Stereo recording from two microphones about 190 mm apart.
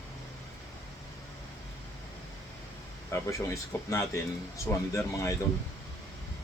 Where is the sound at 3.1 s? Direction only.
15° left (ahead or behind).